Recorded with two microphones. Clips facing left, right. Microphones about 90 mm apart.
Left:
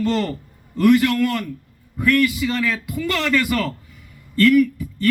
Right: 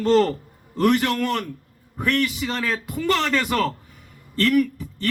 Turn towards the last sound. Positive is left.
turn(degrees=-30)  # may be behind; listen again after turning